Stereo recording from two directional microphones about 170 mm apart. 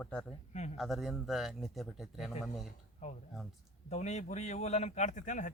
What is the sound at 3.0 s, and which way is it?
A man's voice, 40° left (ahead or behind).